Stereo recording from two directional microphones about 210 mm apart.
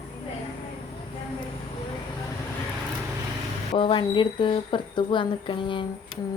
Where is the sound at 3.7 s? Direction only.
25° left (ahead or behind).